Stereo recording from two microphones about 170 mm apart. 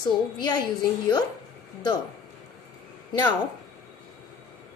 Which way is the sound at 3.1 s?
25° left (ahead or behind).